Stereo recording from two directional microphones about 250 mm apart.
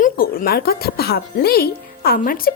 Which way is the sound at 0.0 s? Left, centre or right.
Left.